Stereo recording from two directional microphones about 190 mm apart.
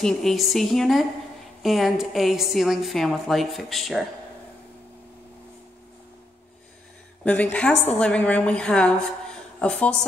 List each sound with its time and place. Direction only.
0.0 s a woman's voice: centre (ahead or behind)
7.2 s a woman's voice: 5° left (ahead or behind)